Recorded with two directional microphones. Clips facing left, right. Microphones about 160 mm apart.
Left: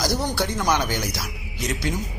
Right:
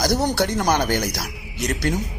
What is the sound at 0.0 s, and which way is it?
A man's voice, 55° right (ahead or behind).